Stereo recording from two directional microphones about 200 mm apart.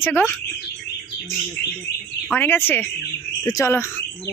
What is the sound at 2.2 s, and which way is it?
Speech, 10° left (ahead or behind).